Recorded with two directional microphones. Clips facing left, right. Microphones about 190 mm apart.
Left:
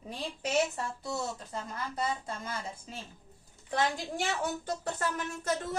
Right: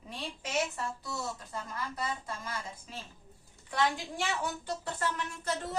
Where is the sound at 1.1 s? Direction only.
25° left (ahead or behind).